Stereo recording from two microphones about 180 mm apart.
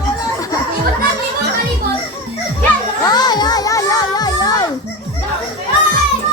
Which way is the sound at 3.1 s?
25° left (ahead or behind).